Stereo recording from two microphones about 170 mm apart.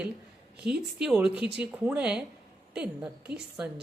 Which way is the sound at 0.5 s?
5° right (ahead or behind).